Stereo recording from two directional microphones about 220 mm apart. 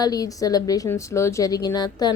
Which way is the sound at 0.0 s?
15° left (ahead or behind).